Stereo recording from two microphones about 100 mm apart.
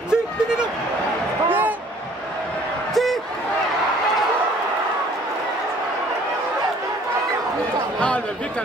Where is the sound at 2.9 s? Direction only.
Centre (ahead or behind).